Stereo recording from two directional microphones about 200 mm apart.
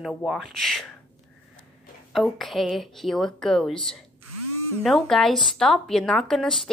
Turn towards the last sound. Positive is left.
turn(degrees=0)  # may be behind; listen again after turning